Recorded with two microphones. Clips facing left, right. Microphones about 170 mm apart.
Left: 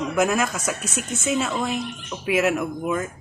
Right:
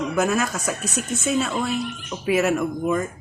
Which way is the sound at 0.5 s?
40° right (ahead or behind).